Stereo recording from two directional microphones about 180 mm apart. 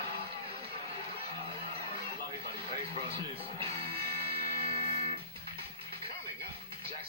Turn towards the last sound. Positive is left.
turn(degrees=-30)  # may be behind; listen again after turning